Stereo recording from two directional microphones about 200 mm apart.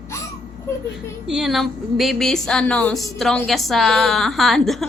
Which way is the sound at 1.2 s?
Centre (ahead or behind).